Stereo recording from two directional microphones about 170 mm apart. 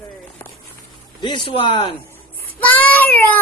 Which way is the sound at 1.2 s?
30° left (ahead or behind).